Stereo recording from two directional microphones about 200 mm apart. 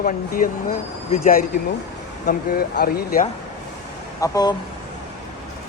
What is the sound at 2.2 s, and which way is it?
A man's voice, 50° left (ahead or behind).